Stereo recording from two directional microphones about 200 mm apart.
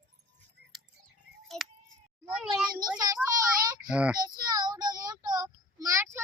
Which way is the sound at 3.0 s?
20° right (ahead or behind).